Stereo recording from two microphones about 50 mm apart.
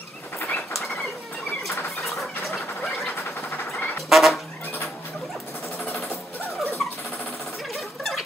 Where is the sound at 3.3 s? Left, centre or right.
Left.